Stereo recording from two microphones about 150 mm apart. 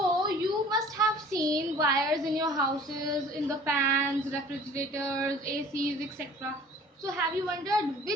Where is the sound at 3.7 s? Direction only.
15° right (ahead or behind).